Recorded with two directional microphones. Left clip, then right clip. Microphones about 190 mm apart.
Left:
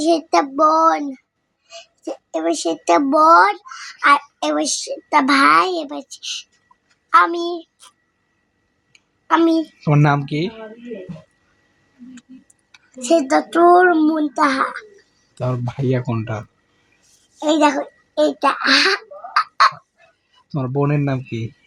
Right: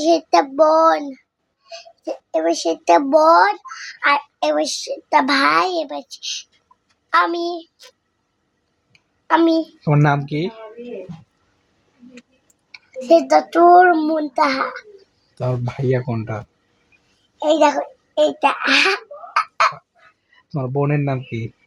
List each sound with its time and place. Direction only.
0.0 s a child's voice: 15° right (ahead or behind)
8.9 s a sound: 15° right (ahead or behind)
9.8 s speech: 15° left (ahead or behind)
12.7 s a child's voice: 10° right (ahead or behind)
15.4 s speech: 15° left (ahead or behind)
17.3 s a child's voice: 10° right (ahead or behind)
20.5 s speech: 15° left (ahead or behind)